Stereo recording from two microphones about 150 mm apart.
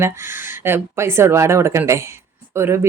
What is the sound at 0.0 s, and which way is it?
Speech, 15° right (ahead or behind).